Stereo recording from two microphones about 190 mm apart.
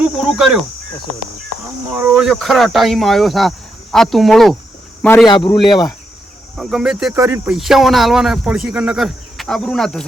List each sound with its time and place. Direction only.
0.0 s speech: centre (ahead or behind)
2.0 s speech: 5° right (ahead or behind)
5.6 s cricket: 25° left (ahead or behind)
6.6 s speech: centre (ahead or behind)
7.1 s speech: 15° right (ahead or behind)
7.5 s speech: centre (ahead or behind)